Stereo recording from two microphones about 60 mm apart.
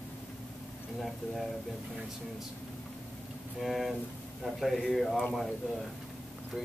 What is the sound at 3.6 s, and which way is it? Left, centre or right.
Speech, centre.